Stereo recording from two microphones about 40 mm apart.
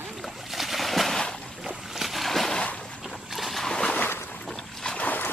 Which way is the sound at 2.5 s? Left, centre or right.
Left.